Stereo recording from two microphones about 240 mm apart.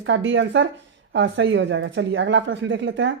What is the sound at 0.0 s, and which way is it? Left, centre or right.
Speech, right.